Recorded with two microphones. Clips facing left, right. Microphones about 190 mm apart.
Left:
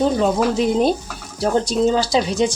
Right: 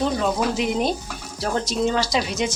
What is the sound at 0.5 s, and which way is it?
Speech, 35° left (ahead or behind).